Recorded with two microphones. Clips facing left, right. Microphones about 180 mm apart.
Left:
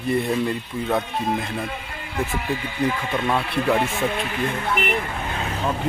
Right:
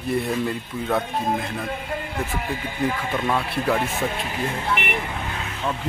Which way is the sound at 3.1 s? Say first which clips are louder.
Left 1 dB; 5° right (ahead or behind).